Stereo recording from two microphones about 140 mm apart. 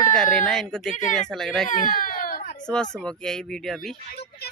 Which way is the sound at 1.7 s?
75° left (ahead or behind).